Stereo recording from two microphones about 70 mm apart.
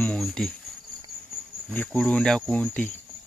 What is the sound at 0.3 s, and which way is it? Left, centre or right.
Speech, centre.